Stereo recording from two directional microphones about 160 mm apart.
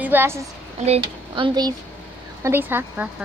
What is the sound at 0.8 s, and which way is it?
Speech, 35° right (ahead or behind).